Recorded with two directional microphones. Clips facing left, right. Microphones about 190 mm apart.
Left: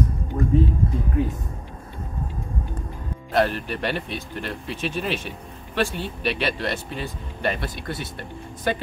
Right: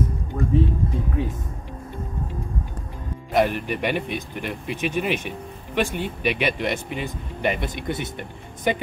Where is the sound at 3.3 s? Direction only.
15° right (ahead or behind).